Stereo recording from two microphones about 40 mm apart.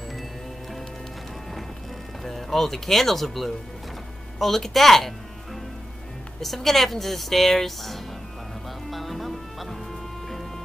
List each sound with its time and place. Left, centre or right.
2.2 s speech: centre
8.9 s music: centre